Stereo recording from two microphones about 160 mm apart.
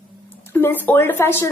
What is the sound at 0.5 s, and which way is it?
Speech, 10° left (ahead or behind).